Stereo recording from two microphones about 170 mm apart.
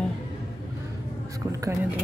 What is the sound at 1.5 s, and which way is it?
Speech, 20° right (ahead or behind).